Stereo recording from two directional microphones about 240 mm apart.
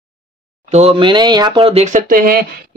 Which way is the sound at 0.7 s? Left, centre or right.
Right.